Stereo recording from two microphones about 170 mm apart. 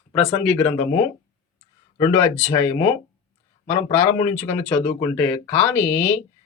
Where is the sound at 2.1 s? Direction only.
15° left (ahead or behind).